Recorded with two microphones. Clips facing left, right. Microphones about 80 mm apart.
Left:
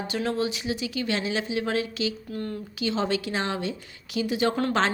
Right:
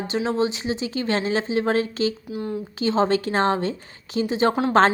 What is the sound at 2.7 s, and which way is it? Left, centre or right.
Speech, right.